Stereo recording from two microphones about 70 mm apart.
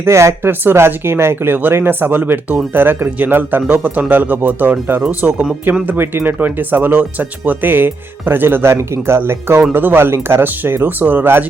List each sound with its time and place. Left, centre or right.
0.0 s speech: right
0.6 s speech: right